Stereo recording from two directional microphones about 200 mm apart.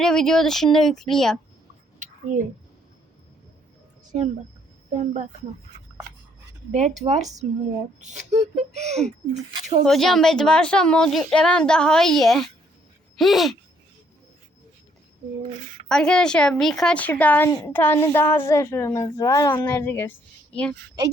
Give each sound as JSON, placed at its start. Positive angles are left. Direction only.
{"t": 0.0, "sound": "speech", "side_deg": 5}
{"t": 2.0, "sound": "a sound", "side_deg": -40}
{"t": 4.9, "sound": "speech", "side_deg": -40}
{"t": 6.7, "sound": "speech", "side_deg": -35}
{"t": 9.8, "sound": "speech", "side_deg": 0}
{"t": 15.9, "sound": "a woman's voice", "side_deg": 5}